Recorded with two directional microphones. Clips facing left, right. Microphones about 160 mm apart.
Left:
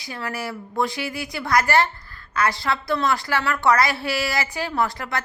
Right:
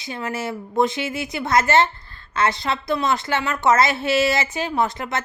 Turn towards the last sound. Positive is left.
turn(degrees=-20)  # may be behind; listen again after turning